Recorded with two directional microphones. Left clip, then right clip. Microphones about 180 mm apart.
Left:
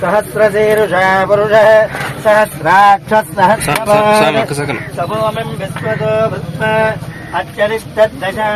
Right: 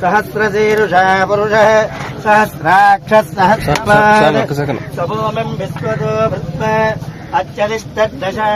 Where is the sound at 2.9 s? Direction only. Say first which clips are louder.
Even; 25° right (ahead or behind).